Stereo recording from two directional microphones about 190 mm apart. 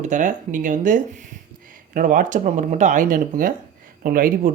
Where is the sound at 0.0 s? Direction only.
40° right (ahead or behind).